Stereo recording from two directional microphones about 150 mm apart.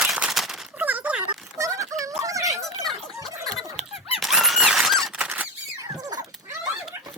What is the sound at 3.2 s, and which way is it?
Fowl, 25° right (ahead or behind).